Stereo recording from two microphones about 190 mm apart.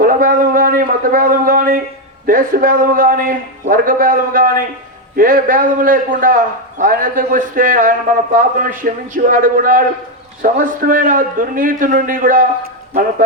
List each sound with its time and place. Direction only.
0.0 s a man's voice: 45° right (ahead or behind)